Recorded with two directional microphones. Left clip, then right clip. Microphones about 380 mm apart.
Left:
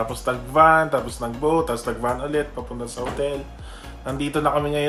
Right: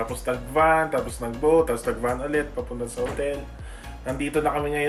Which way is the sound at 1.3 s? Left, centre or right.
Centre.